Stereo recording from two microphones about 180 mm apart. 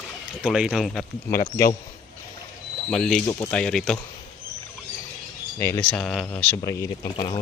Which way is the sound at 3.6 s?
5° left (ahead or behind).